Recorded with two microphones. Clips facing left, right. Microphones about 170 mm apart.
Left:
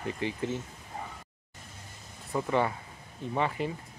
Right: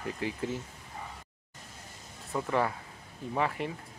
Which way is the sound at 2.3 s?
5° left (ahead or behind).